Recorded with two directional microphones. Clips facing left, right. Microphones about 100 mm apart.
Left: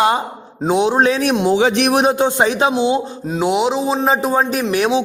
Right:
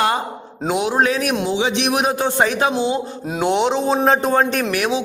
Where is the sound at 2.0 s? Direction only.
25° left (ahead or behind).